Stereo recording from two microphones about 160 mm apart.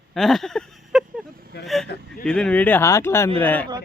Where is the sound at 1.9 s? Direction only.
90° left.